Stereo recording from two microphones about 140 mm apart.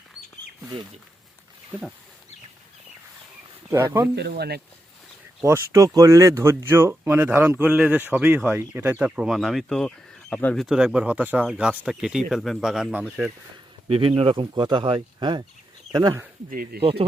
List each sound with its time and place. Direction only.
3.7 s speech: 15° right (ahead or behind)
5.4 s speech: 20° right (ahead or behind)
13.8 s speech: 40° right (ahead or behind)
16.7 s speech: 90° right